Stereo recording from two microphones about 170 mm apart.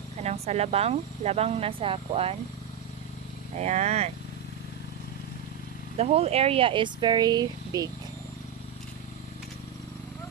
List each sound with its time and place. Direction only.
0.2 s speech: 40° right (ahead or behind)
3.6 s speech: 40° right (ahead or behind)
6.0 s speech: 35° right (ahead or behind)